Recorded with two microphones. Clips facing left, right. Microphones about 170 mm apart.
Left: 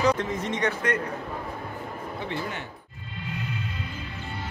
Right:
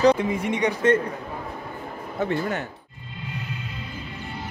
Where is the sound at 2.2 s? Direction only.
45° right (ahead or behind).